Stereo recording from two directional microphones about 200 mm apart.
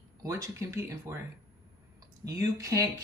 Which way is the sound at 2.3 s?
15° right (ahead or behind).